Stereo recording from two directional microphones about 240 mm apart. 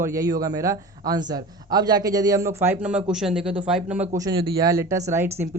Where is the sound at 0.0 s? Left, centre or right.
Centre.